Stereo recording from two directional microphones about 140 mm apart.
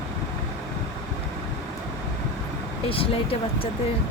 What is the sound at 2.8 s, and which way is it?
Speech, 40° left (ahead or behind).